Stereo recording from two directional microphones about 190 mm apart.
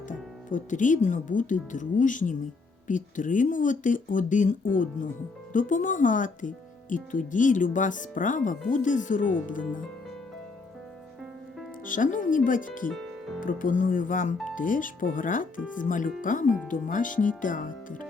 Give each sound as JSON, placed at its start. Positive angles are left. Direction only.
{"t": 0.1, "sound": "speech", "side_deg": 45}
{"t": 11.9, "sound": "speech", "side_deg": 45}
{"t": 12.9, "sound": "music", "side_deg": 0}
{"t": 13.4, "sound": "speech", "side_deg": 45}